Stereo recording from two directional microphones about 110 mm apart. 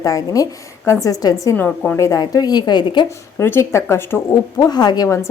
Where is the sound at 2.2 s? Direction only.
35° left (ahead or behind).